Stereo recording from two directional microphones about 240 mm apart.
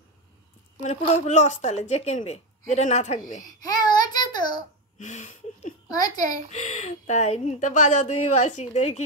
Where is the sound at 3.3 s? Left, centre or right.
Centre.